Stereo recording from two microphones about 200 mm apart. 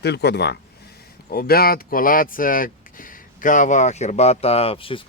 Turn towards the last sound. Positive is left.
turn(degrees=25)  # may be behind; listen again after turning